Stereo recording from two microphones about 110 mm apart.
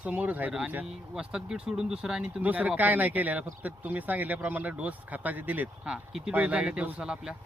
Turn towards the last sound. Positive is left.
turn(degrees=-5)  # may be behind; listen again after turning